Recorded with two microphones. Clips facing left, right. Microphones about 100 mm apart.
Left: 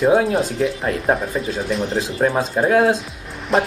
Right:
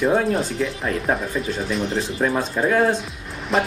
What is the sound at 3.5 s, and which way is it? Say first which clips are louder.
Speech: left 3 dB; centre (ahead or behind).